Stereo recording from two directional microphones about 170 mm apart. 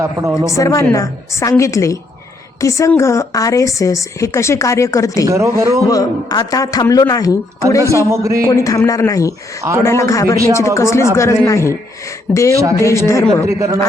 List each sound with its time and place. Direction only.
0.0 s speech: 15° right (ahead or behind)
0.5 s a woman's voice: 20° left (ahead or behind)
5.2 s speech: 15° right (ahead or behind)
5.9 s speech: 20° left (ahead or behind)
7.9 s speech: 15° right (ahead or behind)
8.4 s a woman's voice: 20° left (ahead or behind)
13.5 s speech: 15° right (ahead or behind)